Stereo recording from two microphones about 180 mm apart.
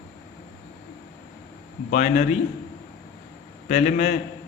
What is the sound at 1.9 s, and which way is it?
Speech, 45° left (ahead or behind).